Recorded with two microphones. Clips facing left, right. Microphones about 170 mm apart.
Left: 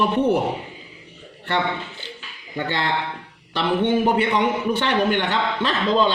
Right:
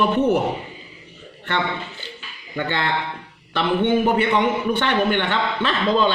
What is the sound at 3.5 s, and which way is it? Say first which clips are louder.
A man's voice: right 1 dB; 35° left (ahead or behind).